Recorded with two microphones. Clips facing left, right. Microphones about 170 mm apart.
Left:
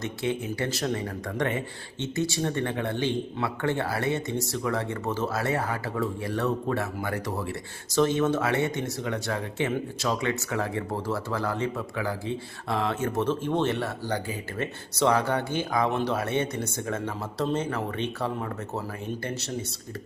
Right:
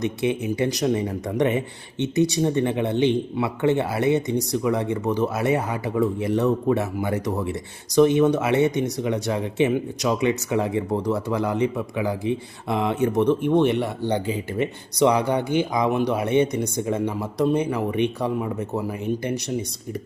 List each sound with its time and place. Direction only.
0.0 s speech: 20° right (ahead or behind)